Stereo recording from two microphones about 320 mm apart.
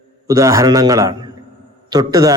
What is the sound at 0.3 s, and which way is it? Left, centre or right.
A man's voice, centre.